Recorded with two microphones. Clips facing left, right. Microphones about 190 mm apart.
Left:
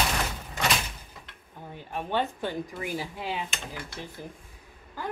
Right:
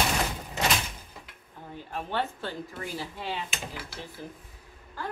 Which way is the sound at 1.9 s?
15° left (ahead or behind).